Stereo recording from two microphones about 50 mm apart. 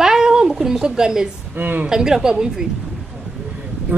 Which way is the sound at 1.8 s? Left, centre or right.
Centre.